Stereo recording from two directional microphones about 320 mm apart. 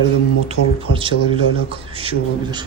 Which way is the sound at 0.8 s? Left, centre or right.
Centre.